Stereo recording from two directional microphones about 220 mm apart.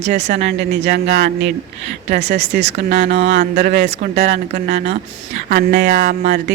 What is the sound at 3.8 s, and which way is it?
Speech, 30° right (ahead or behind).